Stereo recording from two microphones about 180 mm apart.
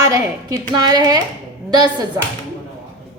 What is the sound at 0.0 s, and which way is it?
A woman's voice, 20° right (ahead or behind).